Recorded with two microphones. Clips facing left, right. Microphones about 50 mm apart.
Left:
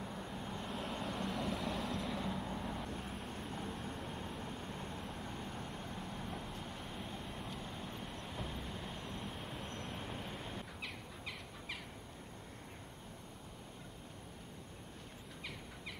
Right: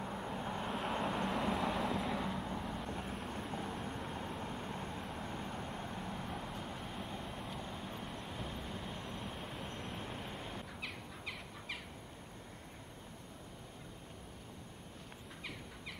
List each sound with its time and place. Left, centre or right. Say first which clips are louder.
0.0 s vehicle: right 4 dB; right; by 4.2 s centre
4.4 s vehicle: right 3 dB; centre